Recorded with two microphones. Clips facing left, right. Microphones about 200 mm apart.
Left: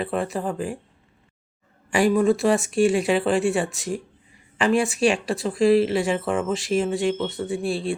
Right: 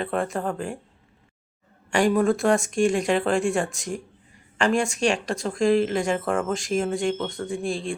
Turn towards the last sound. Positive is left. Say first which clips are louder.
# left 3 dB
turn(degrees=5)  # may be behind; listen again after turning